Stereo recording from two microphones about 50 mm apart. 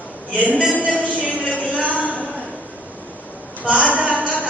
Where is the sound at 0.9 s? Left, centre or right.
Left.